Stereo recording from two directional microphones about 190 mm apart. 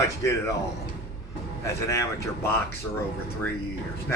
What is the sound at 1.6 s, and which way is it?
Speech, 15° left (ahead or behind).